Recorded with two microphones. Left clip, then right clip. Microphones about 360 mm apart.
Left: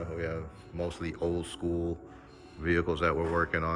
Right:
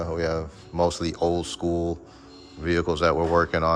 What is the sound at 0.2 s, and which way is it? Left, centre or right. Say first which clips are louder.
Speech: right 9 dB; centre.